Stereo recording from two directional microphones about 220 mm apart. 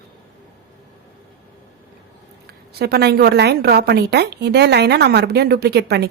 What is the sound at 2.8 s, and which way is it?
A woman's voice, 45° right (ahead or behind).